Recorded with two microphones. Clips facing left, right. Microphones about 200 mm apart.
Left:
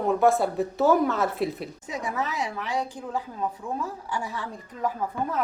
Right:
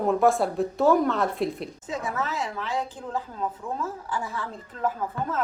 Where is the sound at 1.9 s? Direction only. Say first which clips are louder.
Even; 15° left (ahead or behind).